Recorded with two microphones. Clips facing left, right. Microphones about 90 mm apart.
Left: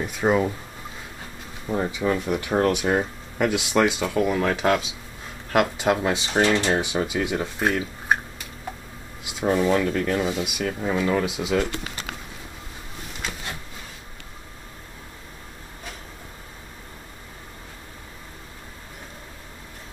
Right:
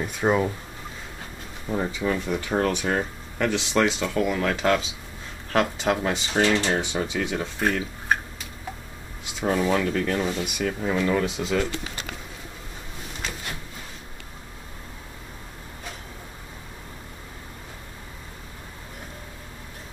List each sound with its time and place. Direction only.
0.0 s speech: 5° left (ahead or behind)
1.7 s speech: 5° left (ahead or behind)
4.5 s speech: 5° left (ahead or behind)
9.2 s speech: 5° left (ahead or behind)